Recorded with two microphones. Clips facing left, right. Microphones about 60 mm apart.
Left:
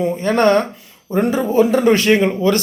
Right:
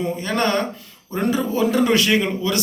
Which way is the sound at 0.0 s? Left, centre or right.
Left.